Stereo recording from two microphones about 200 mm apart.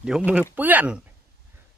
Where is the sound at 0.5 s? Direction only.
10° right (ahead or behind).